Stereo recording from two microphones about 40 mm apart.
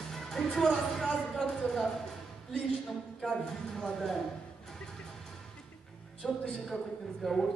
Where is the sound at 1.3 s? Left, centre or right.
Centre.